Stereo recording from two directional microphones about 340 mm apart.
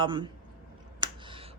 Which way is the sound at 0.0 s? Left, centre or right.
Centre.